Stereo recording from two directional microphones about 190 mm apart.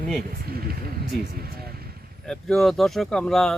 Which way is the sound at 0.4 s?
55° right (ahead or behind).